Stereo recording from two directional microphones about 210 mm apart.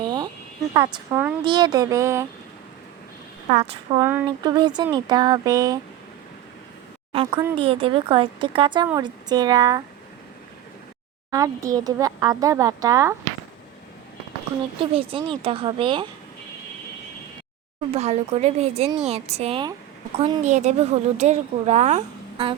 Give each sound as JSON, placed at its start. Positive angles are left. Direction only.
{"t": 0.0, "sound": "a sound", "side_deg": -20}
{"t": 0.7, "sound": "speech", "side_deg": -20}
{"t": 1.1, "sound": "speech", "side_deg": -10}
{"t": 1.5, "sound": "speech", "side_deg": -20}
{"t": 3.5, "sound": "speech", "side_deg": -25}
{"t": 4.0, "sound": "speech", "side_deg": -15}
{"t": 7.1, "sound": "speech", "side_deg": -20}
{"t": 11.3, "sound": "speech", "side_deg": -15}
{"t": 14.8, "sound": "speech", "side_deg": -25}
{"t": 17.9, "sound": "a woman's voice", "side_deg": -30}